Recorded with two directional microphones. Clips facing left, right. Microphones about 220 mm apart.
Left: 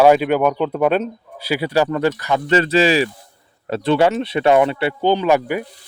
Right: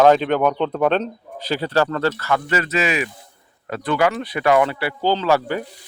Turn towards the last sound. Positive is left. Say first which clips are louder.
# left 2 dB
turn(degrees=15)  # may be behind; listen again after turning